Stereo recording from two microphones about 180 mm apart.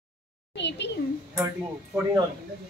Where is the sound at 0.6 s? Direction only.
75° left (ahead or behind).